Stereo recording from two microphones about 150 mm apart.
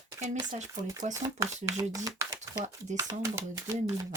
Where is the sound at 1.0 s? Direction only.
50° right (ahead or behind).